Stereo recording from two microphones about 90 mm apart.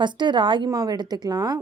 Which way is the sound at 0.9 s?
50° right (ahead or behind).